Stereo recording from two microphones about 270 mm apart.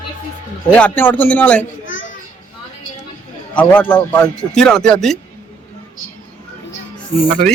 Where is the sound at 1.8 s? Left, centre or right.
Left.